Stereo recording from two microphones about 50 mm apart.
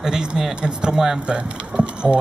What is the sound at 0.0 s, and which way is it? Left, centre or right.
Speech, centre.